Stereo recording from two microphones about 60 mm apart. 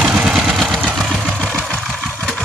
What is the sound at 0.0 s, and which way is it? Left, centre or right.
Vehicle, centre.